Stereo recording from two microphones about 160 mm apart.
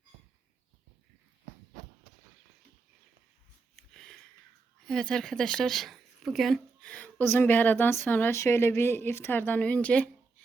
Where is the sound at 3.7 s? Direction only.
Centre (ahead or behind).